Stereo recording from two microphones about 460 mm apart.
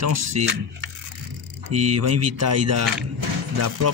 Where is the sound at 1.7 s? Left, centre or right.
Right.